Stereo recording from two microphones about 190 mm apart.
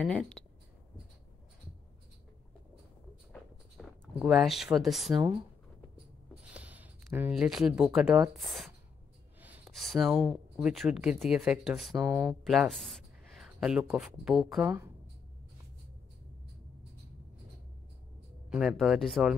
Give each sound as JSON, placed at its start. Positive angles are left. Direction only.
{"t": 0.0, "sound": "speech", "side_deg": 5}
{"t": 3.3, "sound": "a sound", "side_deg": 0}
{"t": 5.1, "sound": "speech", "side_deg": -20}
{"t": 6.5, "sound": "speech", "side_deg": -10}
{"t": 11.9, "sound": "speech", "side_deg": -15}
{"t": 12.4, "sound": "speech", "side_deg": 0}
{"t": 18.5, "sound": "speech", "side_deg": 0}